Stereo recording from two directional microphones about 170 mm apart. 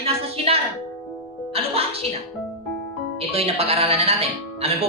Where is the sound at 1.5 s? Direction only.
35° right (ahead or behind).